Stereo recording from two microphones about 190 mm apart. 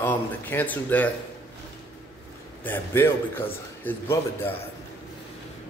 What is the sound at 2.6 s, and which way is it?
Speech, 10° left (ahead or behind).